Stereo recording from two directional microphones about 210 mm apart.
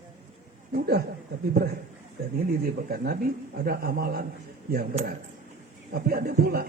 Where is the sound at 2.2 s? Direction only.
45° right (ahead or behind).